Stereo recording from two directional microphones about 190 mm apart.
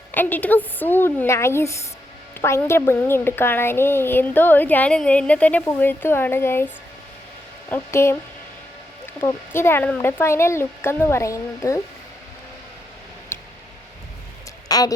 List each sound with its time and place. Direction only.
0.1 s a woman's voice: 10° left (ahead or behind)
7.7 s a woman's voice: 15° left (ahead or behind)
9.2 s a woman's voice: 10° left (ahead or behind)
13.3 s a sound: 15° left (ahead or behind)
14.7 s speech: 20° left (ahead or behind)